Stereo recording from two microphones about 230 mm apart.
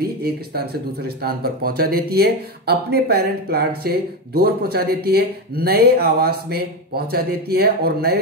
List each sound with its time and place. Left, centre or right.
0.0 s speech: right